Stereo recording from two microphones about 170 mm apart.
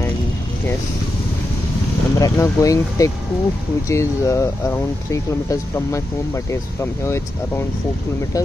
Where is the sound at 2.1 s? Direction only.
20° left (ahead or behind).